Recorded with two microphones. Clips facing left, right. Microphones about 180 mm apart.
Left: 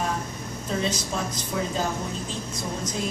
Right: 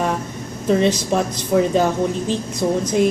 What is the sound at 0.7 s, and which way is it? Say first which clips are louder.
A woman's voice: right 11 dB; 70° right (ahead or behind).